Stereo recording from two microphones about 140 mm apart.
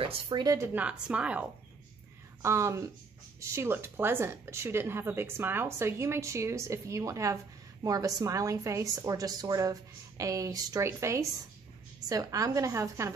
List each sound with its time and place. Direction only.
0.0 s a woman's voice: 30° right (ahead or behind)
0.7 s a woman's voice: 10° right (ahead or behind)
2.4 s a woman's voice: 20° right (ahead or behind)